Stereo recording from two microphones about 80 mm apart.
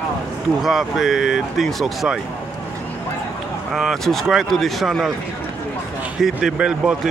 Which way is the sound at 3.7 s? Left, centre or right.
Centre.